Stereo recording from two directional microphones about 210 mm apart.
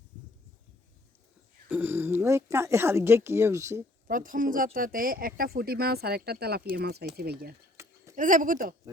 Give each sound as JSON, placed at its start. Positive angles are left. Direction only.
{"t": 1.6, "sound": "speech", "side_deg": -10}
{"t": 4.0, "sound": "speech", "side_deg": -40}
{"t": 7.8, "sound": "a sound", "side_deg": -10}
{"t": 8.1, "sound": "speech", "side_deg": -40}